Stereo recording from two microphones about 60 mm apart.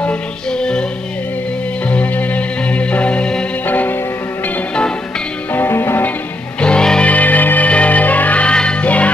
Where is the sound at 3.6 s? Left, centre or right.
Left.